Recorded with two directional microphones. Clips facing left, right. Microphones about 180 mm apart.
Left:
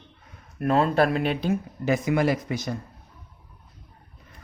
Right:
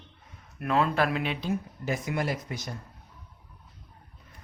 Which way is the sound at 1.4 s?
90° left.